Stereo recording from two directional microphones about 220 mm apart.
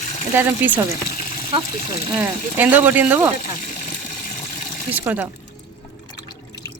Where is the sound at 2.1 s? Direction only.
10° right (ahead or behind).